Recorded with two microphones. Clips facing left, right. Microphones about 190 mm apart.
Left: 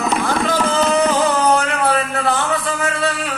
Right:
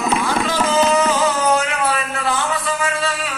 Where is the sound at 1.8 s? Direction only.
55° left (ahead or behind).